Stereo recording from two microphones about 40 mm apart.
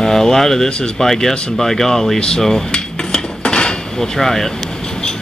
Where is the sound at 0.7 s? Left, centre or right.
Centre.